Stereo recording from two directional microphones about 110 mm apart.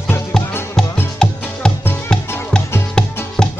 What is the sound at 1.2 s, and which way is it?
Music, 5° left (ahead or behind).